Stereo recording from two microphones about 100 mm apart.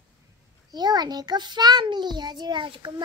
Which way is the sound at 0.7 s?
45° right (ahead or behind).